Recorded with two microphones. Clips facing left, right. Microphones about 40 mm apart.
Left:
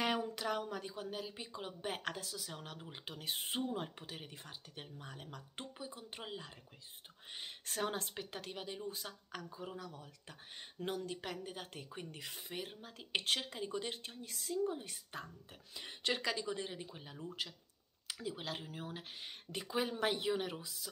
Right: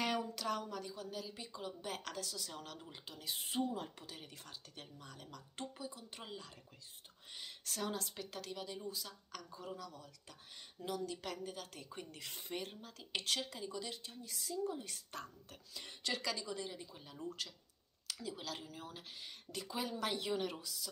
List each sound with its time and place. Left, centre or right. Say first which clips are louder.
0.4 s speech: left 1 dB; left
3.1 s a woman's voice: left 3 dB; left
11.2 s speech: even; left
11.9 s speech: left 2 dB; centre
12.3 s speech: right 3 dB; centre
12.8 s a woman's voice: left 3 dB; left